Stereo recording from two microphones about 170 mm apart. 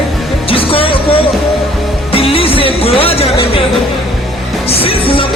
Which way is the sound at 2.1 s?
35° left (ahead or behind).